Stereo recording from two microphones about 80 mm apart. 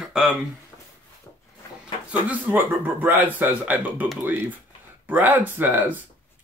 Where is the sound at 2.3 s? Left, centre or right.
Right.